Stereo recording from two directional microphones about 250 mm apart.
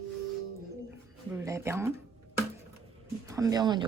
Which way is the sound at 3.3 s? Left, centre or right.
Centre.